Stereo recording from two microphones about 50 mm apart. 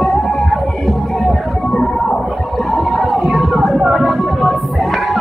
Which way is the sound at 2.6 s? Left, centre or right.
Centre.